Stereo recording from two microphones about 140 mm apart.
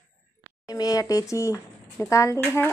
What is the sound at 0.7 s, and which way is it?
Speech, 25° left (ahead or behind).